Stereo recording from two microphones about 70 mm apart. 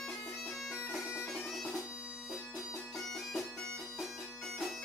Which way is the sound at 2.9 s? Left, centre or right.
Centre.